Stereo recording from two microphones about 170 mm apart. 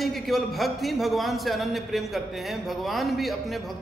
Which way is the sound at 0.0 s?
Centre (ahead or behind).